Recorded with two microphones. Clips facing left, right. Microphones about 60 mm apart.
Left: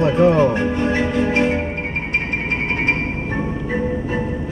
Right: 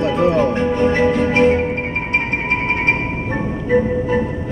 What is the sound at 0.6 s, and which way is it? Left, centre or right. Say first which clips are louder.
Music: right 4 dB; right.